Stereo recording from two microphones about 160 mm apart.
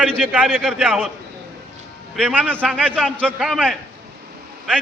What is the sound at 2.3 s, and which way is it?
Speech, 10° right (ahead or behind).